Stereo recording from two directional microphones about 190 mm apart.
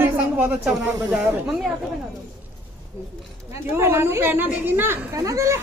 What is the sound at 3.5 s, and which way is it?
A man's voice, 15° right (ahead or behind).